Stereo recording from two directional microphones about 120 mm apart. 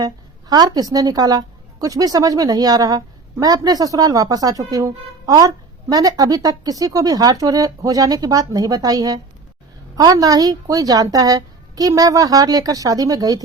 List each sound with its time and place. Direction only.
0.0 s a woman's voice: 35° right (ahead or behind)